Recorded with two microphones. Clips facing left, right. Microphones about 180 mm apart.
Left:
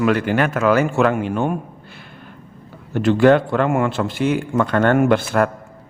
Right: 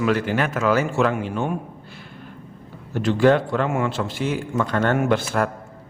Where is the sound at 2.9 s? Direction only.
60° left (ahead or behind).